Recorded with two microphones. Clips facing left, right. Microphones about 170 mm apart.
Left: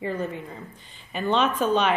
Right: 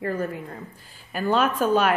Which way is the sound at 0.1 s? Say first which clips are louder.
Right 1 dB; 5° right (ahead or behind).